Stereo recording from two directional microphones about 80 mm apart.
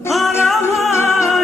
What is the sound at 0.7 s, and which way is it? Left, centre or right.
Music, centre.